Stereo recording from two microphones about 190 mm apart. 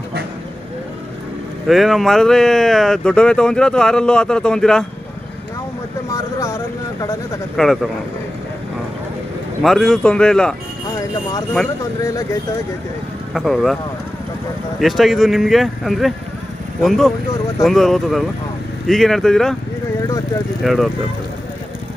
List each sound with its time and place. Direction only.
1.7 s speech: centre (ahead or behind)
6.1 s vehicle: 15° left (ahead or behind)
7.5 s speech: centre (ahead or behind)
9.6 s speech: centre (ahead or behind)
12.0 s speech: 20° left (ahead or behind)
13.3 s speech: centre (ahead or behind)
14.8 s speech: centre (ahead or behind)
20.6 s speech: centre (ahead or behind)